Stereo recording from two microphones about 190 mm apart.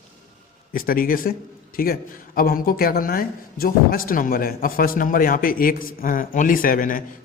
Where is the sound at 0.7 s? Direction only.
50° left (ahead or behind).